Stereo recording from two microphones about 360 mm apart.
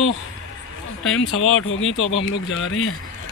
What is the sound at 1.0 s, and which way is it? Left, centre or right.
Speech, left.